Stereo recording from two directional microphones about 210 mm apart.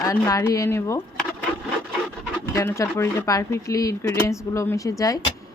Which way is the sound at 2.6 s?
15° left (ahead or behind).